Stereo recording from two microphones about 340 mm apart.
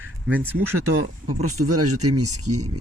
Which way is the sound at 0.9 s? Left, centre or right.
Right.